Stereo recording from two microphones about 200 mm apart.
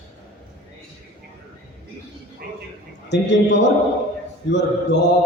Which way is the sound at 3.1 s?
60° left (ahead or behind).